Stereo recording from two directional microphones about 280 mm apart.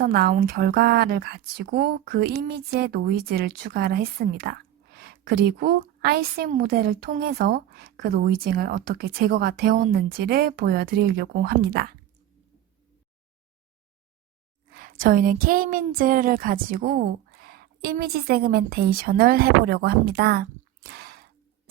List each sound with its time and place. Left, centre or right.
0.0 s a woman's voice: right
14.7 s a woman's voice: right